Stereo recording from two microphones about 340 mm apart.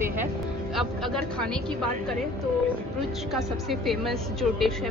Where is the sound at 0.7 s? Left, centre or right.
Centre.